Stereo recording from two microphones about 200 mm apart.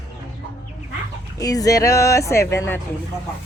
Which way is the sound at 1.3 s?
20° left (ahead or behind).